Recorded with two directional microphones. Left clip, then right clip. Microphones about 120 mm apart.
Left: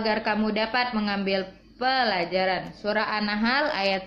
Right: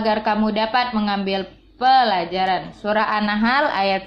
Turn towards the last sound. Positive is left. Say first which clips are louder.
# right 6 dB
turn(degrees=-40)  # may be behind; listen again after turning